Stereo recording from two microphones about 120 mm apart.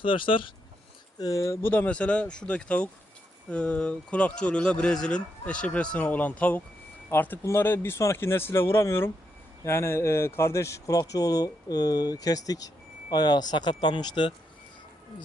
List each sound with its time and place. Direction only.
0.0 s speech: 45° left (ahead or behind)
1.2 s speech: 30° left (ahead or behind)